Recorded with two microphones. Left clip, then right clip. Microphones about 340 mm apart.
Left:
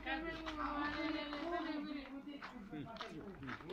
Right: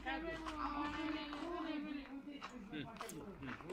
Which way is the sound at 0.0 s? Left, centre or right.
Centre.